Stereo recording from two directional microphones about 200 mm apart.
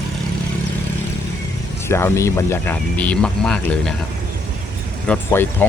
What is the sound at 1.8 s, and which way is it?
Speech, 15° left (ahead or behind).